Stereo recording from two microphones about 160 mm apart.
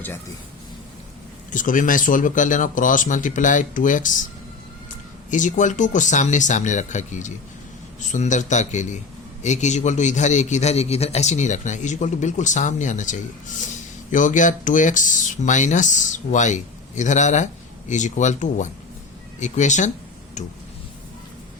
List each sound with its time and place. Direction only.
1.5 s speech: 55° left (ahead or behind)
5.3 s speech: 50° left (ahead or behind)